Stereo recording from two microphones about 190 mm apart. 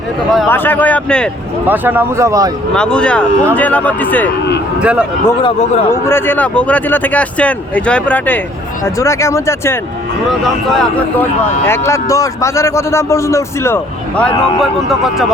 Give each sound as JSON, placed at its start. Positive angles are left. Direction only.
{"t": 0.4, "sound": "a man's voice", "side_deg": 10}
{"t": 1.6, "sound": "speech", "side_deg": -10}
{"t": 2.7, "sound": "a man's voice", "side_deg": 5}
{"t": 4.8, "sound": "speech", "side_deg": -5}
{"t": 5.4, "sound": "speech", "side_deg": 25}
{"t": 5.9, "sound": "a man's voice", "side_deg": 10}
{"t": 10.4, "sound": "speech", "side_deg": 0}
{"t": 11.9, "sound": "a man's voice", "side_deg": 15}